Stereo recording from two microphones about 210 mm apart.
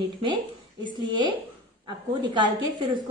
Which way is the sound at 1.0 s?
20° right (ahead or behind).